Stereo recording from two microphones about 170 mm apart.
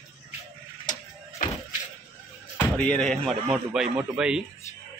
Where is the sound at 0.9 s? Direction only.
45° left (ahead or behind).